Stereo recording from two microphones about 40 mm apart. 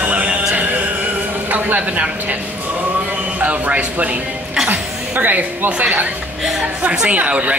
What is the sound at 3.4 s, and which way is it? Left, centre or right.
Speech, right.